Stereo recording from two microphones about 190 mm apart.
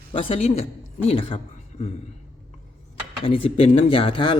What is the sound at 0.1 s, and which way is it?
Speech, 30° left (ahead or behind).